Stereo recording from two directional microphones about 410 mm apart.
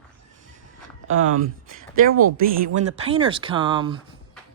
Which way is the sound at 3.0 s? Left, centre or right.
Centre.